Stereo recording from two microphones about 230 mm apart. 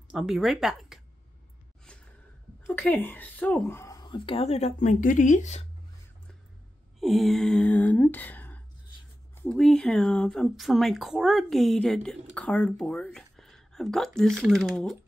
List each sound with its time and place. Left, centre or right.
0.1 s speech: centre
2.6 s speech: centre; by 5.7 s left
7.0 s a sound: centre
9.4 s speech: centre